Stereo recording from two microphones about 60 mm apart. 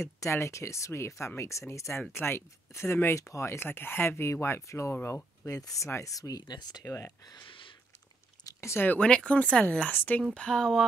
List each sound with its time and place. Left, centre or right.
0.2 s speech: left
2.1 s speech: left
3.5 s speech: left
4.3 s speech: left
5.0 s speech: left
5.5 s speech: left
6.8 s speech: left
8.5 s speech: left
9.0 s speech: centre
10.3 s speech: centre